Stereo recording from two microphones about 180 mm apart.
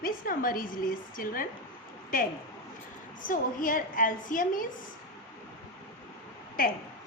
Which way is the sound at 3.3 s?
50° left (ahead or behind).